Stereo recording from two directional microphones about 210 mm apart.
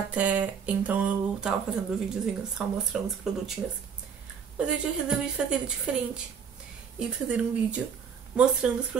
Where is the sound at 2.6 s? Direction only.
Centre (ahead or behind).